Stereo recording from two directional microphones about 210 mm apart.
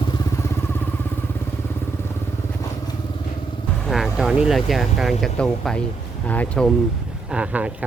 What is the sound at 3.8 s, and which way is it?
Speech, centre (ahead or behind).